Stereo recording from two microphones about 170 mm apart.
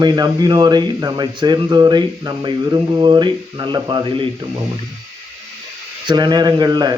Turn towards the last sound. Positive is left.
turn(degrees=-25)  # may be behind; listen again after turning